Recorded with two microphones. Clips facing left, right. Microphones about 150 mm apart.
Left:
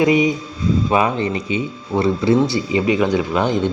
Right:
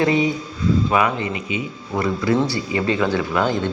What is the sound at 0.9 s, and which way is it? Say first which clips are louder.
Speech: left 2 dB; 25° left (ahead or behind).